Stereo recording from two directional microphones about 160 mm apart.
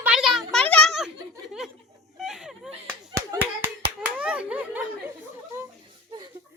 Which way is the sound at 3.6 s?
10° right (ahead or behind).